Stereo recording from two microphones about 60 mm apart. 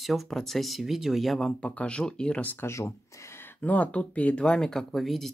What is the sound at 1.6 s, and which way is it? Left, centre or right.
Speech, left.